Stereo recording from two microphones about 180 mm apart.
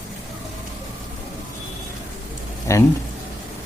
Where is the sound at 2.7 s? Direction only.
15° left (ahead or behind).